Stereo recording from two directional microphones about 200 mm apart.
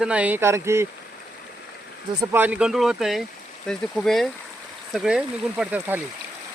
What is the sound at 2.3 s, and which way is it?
Speech, 10° right (ahead or behind).